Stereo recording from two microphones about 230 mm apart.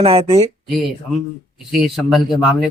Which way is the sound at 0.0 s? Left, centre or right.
Right.